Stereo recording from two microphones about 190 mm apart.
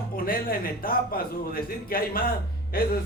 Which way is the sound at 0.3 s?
50° left (ahead or behind).